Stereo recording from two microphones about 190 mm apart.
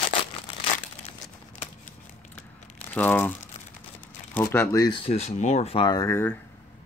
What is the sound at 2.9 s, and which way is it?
Speech, 10° left (ahead or behind).